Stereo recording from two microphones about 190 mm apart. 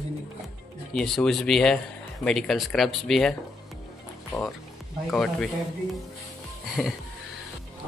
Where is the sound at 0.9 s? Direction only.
5° left (ahead or behind).